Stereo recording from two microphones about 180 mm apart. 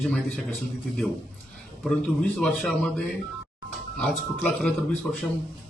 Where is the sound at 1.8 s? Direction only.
Centre (ahead or behind).